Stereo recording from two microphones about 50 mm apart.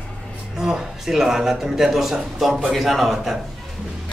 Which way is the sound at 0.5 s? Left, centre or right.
Centre.